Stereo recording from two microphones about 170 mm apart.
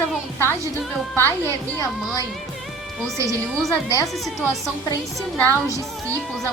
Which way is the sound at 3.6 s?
20° left (ahead or behind).